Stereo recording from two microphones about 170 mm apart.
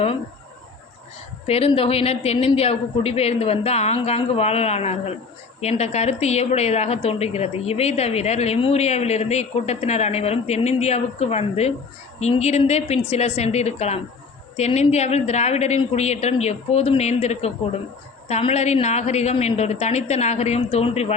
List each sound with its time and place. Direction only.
1.5 s a woman's voice: 35° left (ahead or behind)